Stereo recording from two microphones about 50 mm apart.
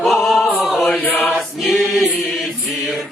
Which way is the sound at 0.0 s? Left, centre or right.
Centre.